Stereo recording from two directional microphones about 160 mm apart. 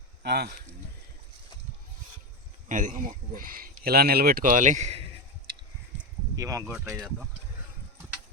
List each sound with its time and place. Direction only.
0.2 s speech: 90° right
2.6 s speech: 55° right (ahead or behind)
6.3 s speech: 20° right (ahead or behind)
6.7 s speech: centre (ahead or behind)